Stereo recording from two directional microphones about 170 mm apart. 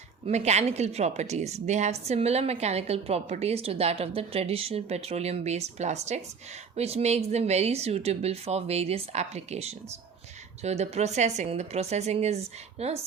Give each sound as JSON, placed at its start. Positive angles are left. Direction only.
{"t": 0.3, "sound": "a woman's voice", "side_deg": -40}